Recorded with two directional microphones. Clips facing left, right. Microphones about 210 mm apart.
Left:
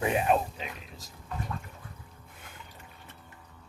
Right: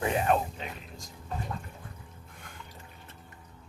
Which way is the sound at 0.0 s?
15° left (ahead or behind).